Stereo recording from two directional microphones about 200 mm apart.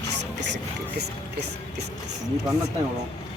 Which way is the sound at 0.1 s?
60° right (ahead or behind).